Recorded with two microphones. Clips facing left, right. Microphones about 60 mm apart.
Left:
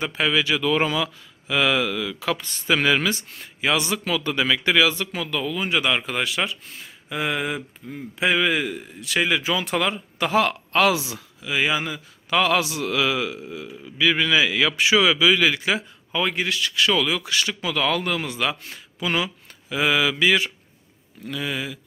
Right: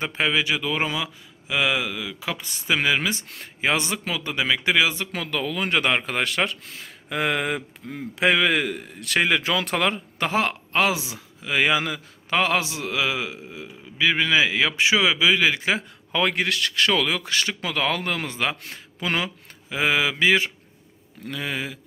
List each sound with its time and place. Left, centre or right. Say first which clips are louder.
0.0 s speech: left 1 dB; right; by 3.1 s centre
3.4 s a man's voice: left 1 dB; right
5.1 s a man's voice: left 1 dB; right
10.3 s a man's voice: left 3 dB; right
11.4 s a man's voice: right 2 dB; right
12.3 s a man's voice: left 2 dB; right
16.1 s a man's voice: right 1 dB; right
19.7 s mantra: left 1 dB; right